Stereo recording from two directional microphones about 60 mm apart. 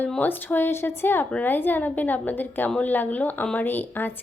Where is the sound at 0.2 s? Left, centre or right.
Left.